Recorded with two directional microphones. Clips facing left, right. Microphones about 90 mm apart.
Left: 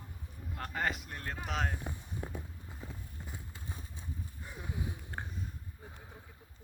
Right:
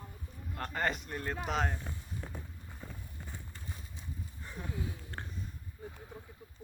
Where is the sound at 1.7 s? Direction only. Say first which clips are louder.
Left 1 dB; 15° left (ahead or behind).